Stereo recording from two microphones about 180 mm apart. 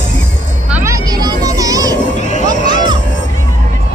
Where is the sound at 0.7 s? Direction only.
10° right (ahead or behind).